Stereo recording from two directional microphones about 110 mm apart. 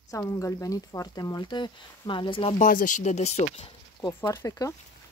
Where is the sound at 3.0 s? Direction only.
90° left.